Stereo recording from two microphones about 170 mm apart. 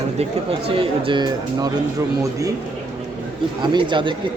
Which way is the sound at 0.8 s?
30° right (ahead or behind).